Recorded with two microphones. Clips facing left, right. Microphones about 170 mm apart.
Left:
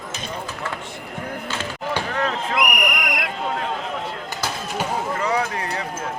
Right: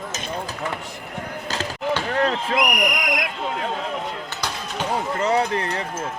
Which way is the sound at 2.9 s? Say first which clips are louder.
Right 1 dB; 60° left (ahead or behind).